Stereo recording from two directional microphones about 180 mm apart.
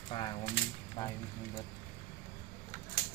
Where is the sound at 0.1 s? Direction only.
25° left (ahead or behind).